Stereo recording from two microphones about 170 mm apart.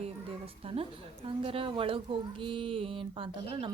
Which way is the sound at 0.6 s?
35° right (ahead or behind).